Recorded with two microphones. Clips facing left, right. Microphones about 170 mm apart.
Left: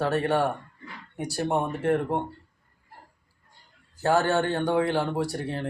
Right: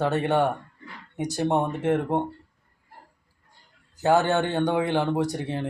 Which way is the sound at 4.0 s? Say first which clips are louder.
Right 2 dB; 20° right (ahead or behind).